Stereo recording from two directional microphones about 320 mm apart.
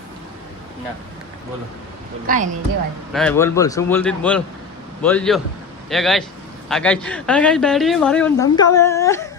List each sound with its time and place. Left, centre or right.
2.2 s speech: right
3.1 s a man's voice: centre